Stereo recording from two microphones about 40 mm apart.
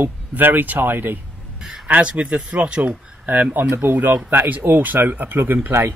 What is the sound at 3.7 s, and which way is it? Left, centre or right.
Speech, right.